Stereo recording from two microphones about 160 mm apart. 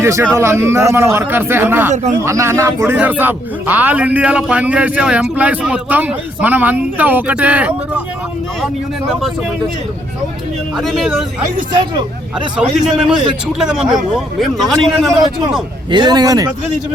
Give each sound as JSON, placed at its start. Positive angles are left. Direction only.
{"t": 0.0, "sound": "speech", "side_deg": -15}
{"t": 10.8, "sound": "speech", "side_deg": 0}
{"t": 11.7, "sound": "speech", "side_deg": -25}
{"t": 12.5, "sound": "speech", "side_deg": -5}
{"t": 15.9, "sound": "speech", "side_deg": -25}